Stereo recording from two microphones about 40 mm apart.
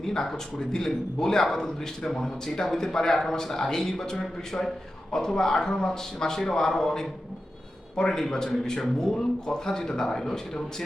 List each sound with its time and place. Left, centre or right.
0.0 s a man's voice: centre